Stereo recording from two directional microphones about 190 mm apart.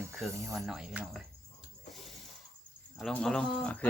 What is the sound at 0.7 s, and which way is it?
Speech, 5° right (ahead or behind).